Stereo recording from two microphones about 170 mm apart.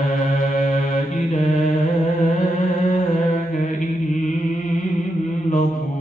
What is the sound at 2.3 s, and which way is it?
Chant, 50° left (ahead or behind).